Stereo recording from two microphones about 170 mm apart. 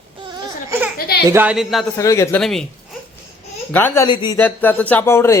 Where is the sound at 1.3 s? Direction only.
10° right (ahead or behind).